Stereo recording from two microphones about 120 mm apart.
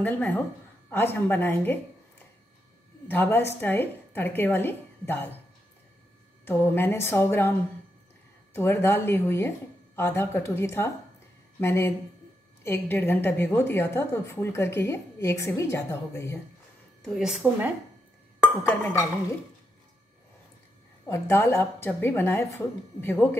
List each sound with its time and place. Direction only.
0.0 s a woman's voice: 15° left (ahead or behind)
6.4 s a woman's voice: 20° left (ahead or behind)
8.5 s a woman's voice: 20° left (ahead or behind)
17.2 s a woman's voice: 5° right (ahead or behind)
18.6 s a woman's voice: 20° left (ahead or behind)
21.1 s a woman's voice: 20° left (ahead or behind)